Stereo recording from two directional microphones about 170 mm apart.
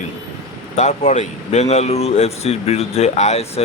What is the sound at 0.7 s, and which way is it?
Speech, 45° left (ahead or behind).